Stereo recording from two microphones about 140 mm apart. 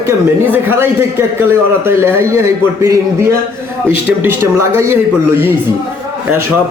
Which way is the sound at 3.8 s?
15° right (ahead or behind).